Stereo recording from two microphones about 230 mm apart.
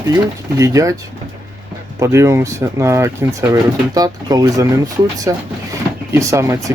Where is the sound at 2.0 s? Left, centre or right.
Centre.